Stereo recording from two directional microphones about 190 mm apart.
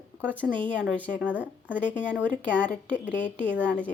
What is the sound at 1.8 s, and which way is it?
Speech, 10° left (ahead or behind).